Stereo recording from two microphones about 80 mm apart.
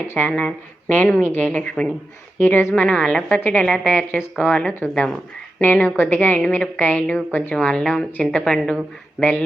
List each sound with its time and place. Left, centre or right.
0.1 s a woman's voice: left
2.4 s a woman's voice: left
2.7 s a woman's voice: centre